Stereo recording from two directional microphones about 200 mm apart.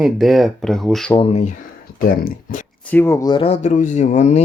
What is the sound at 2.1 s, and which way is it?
Speech, 40° left (ahead or behind).